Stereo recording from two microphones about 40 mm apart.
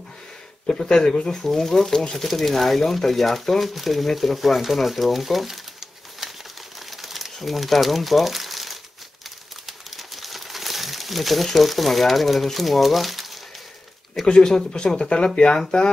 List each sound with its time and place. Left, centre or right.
0.8 s speech: centre
6.9 s crumpling: centre
14.2 s speech: centre